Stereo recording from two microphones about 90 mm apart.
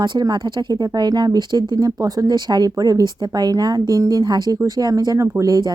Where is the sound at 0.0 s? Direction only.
50° right (ahead or behind).